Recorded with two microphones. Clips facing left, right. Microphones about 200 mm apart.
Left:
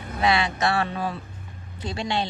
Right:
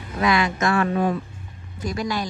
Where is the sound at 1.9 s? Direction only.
25° left (ahead or behind).